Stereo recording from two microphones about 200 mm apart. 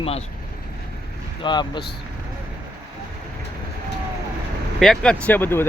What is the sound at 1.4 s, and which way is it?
Speech, 20° left (ahead or behind).